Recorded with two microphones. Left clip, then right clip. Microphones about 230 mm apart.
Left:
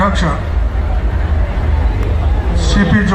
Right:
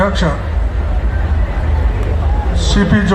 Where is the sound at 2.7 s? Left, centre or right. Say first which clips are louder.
Even; right.